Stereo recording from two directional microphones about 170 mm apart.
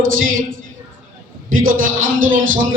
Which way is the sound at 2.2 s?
50° right (ahead or behind).